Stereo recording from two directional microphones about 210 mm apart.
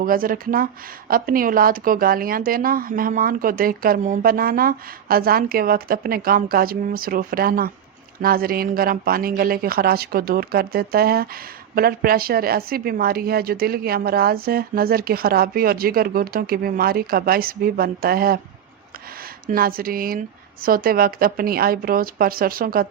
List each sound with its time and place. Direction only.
0.0 s speech: 40° right (ahead or behind)
19.5 s speech: 45° right (ahead or behind)